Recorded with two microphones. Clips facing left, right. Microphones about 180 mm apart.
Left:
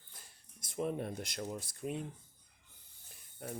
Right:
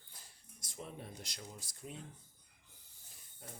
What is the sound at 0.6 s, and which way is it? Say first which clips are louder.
Speech: left 12 dB; 60° left (ahead or behind).